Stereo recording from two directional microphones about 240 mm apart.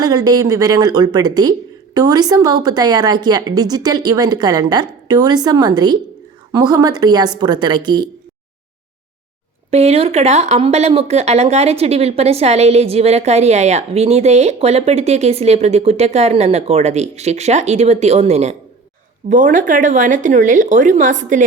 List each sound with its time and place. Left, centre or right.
0.0 s speech: centre
9.6 s a woman's voice: right